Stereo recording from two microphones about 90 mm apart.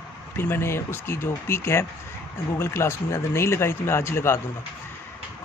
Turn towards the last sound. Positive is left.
turn(degrees=30)  # may be behind; listen again after turning